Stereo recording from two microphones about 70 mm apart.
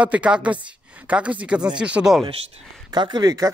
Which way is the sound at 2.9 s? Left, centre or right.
Right.